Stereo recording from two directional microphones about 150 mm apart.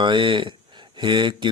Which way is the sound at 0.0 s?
30° right (ahead or behind).